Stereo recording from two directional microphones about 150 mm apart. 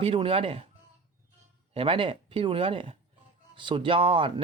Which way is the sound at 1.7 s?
35° right (ahead or behind).